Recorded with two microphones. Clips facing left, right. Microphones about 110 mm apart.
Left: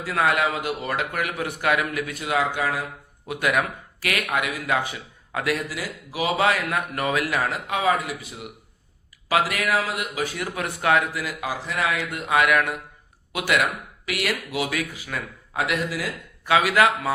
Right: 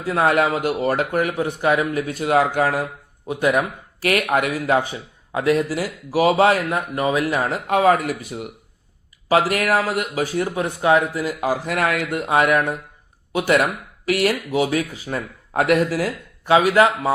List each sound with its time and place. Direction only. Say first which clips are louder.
0.0 s speech: right 4 dB; 30° right (ahead or behind)
0.3 s speech: right 6 dB; 40° right (ahead or behind)
1.3 s speech: right 4 dB; 25° right (ahead or behind); by 2.8 s 45° right (ahead or behind)
3.2 s speech: right 4 dB; 25° right (ahead or behind)
4.0 s speech: right 6 dB; 40° right (ahead or behind)
6.7 s speech: right 4 dB; 25° right (ahead or behind)
7.5 s speech: right 10 dB; 50° right (ahead or behind)
10.2 s speech: right 6 dB; 35° right (ahead or behind); by 12.2 s 55° right (ahead or behind)
12.3 s speech: right 2 dB; 40° right (ahead or behind)
15.5 s speech: right 8 dB; 50° right (ahead or behind)
16.5 s speech: right 4 dB; 30° right (ahead or behind)